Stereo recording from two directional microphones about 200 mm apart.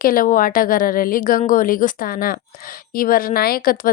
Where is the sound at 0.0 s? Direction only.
45° left (ahead or behind).